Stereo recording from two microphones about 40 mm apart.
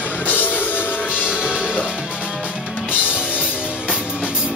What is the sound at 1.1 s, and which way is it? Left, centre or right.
Music, right.